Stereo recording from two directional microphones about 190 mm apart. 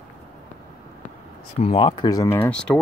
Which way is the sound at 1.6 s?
30° left (ahead or behind).